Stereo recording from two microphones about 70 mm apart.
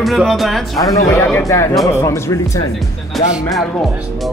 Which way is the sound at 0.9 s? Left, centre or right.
Left.